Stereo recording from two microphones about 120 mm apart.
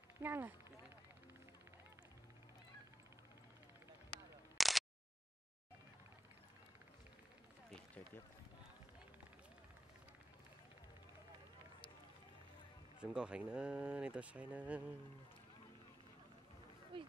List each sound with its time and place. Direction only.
0.2 s speech: 15° right (ahead or behind)
4.6 s a sound: centre (ahead or behind)
13.0 s speech: 10° right (ahead or behind)
16.9 s speech: 45° right (ahead or behind)